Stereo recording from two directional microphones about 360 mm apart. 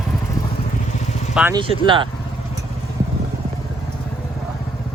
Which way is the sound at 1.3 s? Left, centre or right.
Centre.